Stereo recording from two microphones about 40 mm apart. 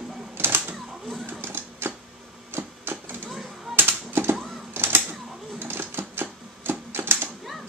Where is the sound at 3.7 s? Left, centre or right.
Right.